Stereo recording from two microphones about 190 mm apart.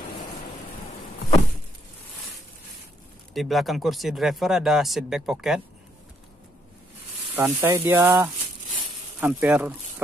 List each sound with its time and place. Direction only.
3.3 s speech: centre (ahead or behind)
7.3 s speech: 10° right (ahead or behind)